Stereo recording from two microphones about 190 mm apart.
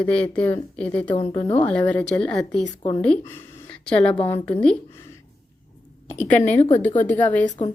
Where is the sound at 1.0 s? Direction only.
25° left (ahead or behind).